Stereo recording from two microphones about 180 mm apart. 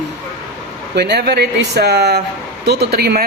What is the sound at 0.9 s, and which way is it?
Speech, 65° right (ahead or behind).